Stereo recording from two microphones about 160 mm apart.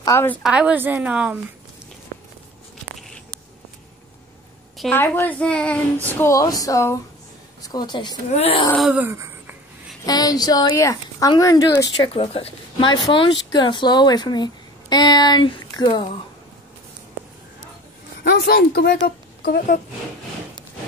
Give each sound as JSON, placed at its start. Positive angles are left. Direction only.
{"t": 0.0, "sound": "a woman's voice", "side_deg": 15}
{"t": 0.4, "sound": "a woman's voice", "side_deg": -5}
{"t": 4.9, "sound": "a child's voice", "side_deg": 15}
{"t": 8.3, "sound": "speech", "side_deg": 40}
{"t": 8.9, "sound": "a sound", "side_deg": -15}
{"t": 10.0, "sound": "a child's voice", "side_deg": 25}
{"t": 18.2, "sound": "speech", "side_deg": 85}